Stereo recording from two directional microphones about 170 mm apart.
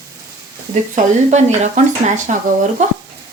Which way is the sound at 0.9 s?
45° right (ahead or behind).